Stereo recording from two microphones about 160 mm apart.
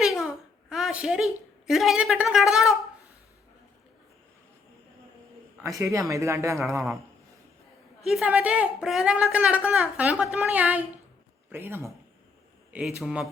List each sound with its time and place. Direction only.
0.2 s a child's voice: 5° right (ahead or behind)
5.5 s a man's voice: 15° right (ahead or behind)
8.0 s a woman's voice: 5° right (ahead or behind)
12.7 s a man's voice: 5° right (ahead or behind)